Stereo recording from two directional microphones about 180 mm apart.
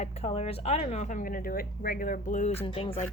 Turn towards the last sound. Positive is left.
turn(degrees=30)  # may be behind; listen again after turning